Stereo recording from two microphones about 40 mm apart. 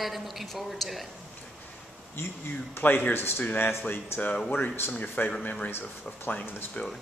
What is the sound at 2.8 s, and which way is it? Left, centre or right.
Speech, left.